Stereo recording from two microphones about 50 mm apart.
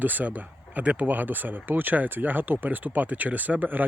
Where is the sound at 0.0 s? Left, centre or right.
Right.